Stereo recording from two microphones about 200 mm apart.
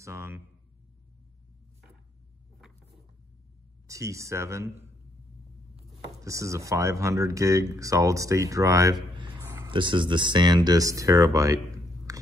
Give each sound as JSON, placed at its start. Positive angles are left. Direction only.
{"t": 0.0, "sound": "speech", "side_deg": -15}
{"t": 3.8, "sound": "speech", "side_deg": -15}
{"t": 6.2, "sound": "speech", "side_deg": -15}